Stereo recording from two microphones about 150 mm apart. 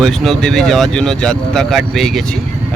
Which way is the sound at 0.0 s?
5° left (ahead or behind).